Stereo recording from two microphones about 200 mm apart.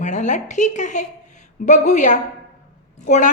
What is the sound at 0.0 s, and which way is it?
A woman's voice, 35° left (ahead or behind).